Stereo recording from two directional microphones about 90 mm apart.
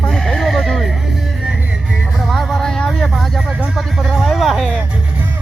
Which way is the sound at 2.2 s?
Centre (ahead or behind).